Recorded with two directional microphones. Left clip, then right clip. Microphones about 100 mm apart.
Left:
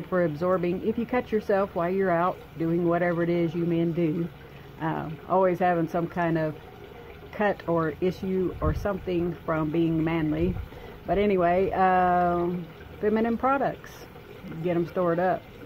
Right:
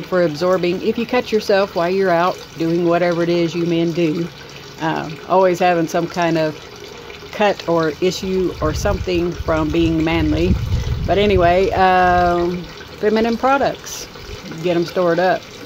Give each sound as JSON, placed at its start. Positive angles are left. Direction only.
{"t": 0.1, "sound": "speech", "side_deg": -5}